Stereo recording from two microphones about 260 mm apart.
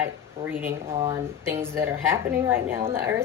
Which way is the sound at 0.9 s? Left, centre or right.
Right.